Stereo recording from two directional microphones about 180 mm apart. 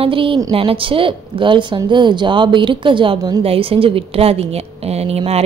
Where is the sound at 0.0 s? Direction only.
30° right (ahead or behind).